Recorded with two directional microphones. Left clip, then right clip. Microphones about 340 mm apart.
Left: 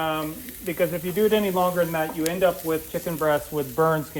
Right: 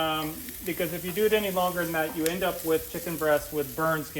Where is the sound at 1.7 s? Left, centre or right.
Centre.